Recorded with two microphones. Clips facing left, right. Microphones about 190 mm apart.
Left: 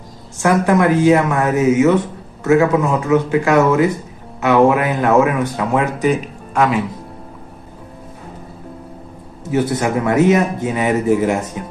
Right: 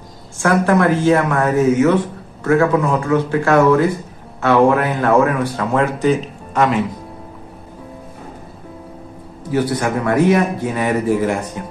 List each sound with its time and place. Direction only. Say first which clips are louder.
0.4 s speech: left 1 dB; 15° left (ahead or behind)
6.5 s speech: even; 5° left (ahead or behind)
9.5 s a man's voice: left 1 dB; 20° left (ahead or behind)